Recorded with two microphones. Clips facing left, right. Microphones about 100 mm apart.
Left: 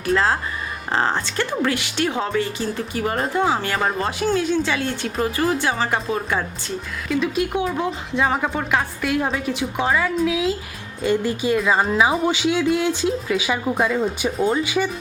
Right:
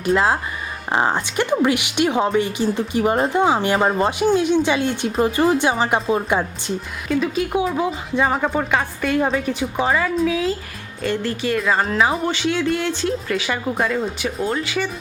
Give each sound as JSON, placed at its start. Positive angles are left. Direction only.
{"t": 0.0, "sound": "speech", "side_deg": -20}
{"t": 7.1, "sound": "speech", "side_deg": 0}
{"t": 11.0, "sound": "speech", "side_deg": 15}
{"t": 11.6, "sound": "speech", "side_deg": 5}
{"t": 14.6, "sound": "speech", "side_deg": 15}